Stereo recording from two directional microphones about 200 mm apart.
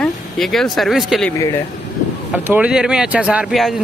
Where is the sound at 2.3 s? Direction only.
10° right (ahead or behind).